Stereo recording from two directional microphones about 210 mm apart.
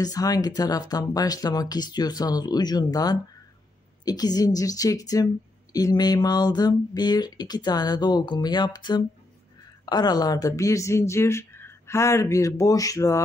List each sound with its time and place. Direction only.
0.0 s speech: 15° left (ahead or behind)